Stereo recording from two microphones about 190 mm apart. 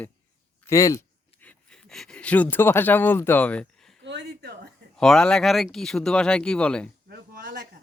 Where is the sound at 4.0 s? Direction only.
65° right (ahead or behind).